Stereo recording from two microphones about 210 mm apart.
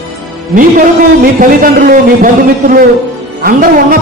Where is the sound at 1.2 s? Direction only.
40° right (ahead or behind).